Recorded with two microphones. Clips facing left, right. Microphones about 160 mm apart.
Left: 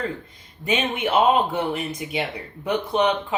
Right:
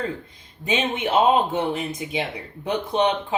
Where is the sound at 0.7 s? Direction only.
25° right (ahead or behind).